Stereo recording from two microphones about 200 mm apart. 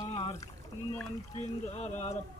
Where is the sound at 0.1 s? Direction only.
25° left (ahead or behind).